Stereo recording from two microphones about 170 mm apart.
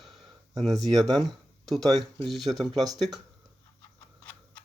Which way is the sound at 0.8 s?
Centre (ahead or behind).